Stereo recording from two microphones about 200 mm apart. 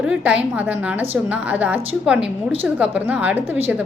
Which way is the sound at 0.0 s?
5° right (ahead or behind).